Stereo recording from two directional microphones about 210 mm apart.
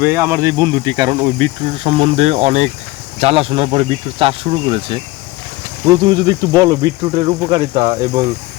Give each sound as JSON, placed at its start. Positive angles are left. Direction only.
{"t": 0.0, "sound": "speech", "side_deg": -10}